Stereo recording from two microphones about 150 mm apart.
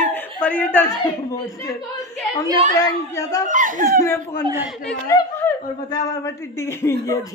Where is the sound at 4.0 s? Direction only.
20° left (ahead or behind).